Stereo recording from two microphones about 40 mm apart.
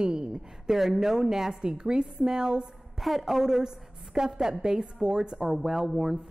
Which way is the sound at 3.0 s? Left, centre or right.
Centre.